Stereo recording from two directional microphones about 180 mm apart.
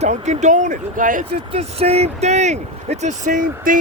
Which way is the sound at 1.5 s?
35° right (ahead or behind).